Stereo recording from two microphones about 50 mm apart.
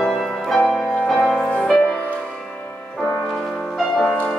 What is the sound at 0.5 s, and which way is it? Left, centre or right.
Music, centre.